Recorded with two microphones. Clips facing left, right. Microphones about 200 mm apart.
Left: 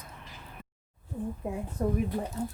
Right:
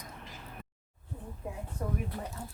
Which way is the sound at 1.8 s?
40° left (ahead or behind).